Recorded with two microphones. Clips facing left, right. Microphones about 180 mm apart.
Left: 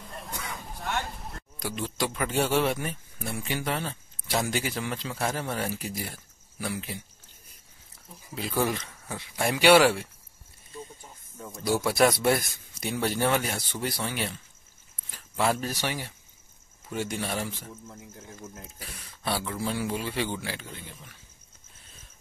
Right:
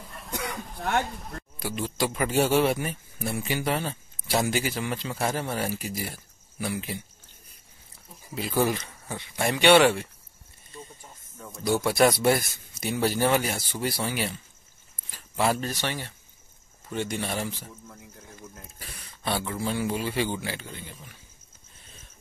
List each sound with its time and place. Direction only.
0.3 s a sound: 60° right (ahead or behind)
1.6 s speech: 5° right (ahead or behind)
8.4 s speech: centre (ahead or behind)
11.3 s speech: 10° left (ahead or behind)
15.7 s speech: 10° left (ahead or behind)
17.8 s speech: 25° left (ahead or behind)
18.8 s speech: centre (ahead or behind)